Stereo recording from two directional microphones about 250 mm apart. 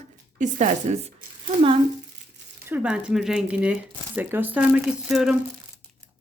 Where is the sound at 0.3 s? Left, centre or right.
Right.